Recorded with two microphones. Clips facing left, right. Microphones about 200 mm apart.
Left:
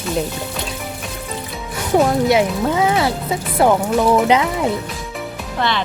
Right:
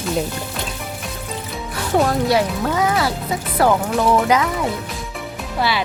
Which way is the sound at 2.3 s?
20° left (ahead or behind).